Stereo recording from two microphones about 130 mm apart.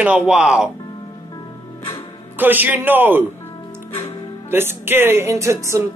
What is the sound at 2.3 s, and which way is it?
Speech, 15° right (ahead or behind).